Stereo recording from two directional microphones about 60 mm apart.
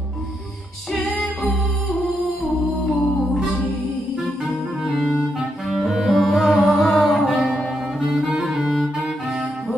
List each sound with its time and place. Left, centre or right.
1.1 s music: centre
2.8 s music: centre
4.5 s music: centre
8.1 s clarinet: centre